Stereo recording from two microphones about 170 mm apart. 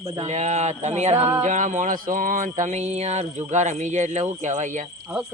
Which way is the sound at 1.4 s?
45° right (ahead or behind).